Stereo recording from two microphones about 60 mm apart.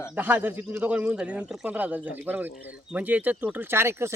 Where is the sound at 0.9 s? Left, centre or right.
Centre.